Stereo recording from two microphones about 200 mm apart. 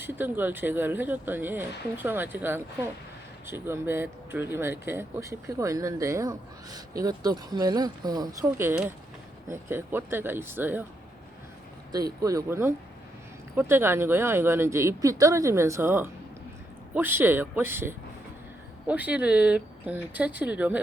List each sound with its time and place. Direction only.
0.0 s speech: 10° right (ahead or behind)
11.9 s speech: 20° right (ahead or behind)